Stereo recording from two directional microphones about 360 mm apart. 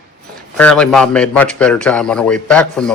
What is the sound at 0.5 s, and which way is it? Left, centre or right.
A man's voice, centre.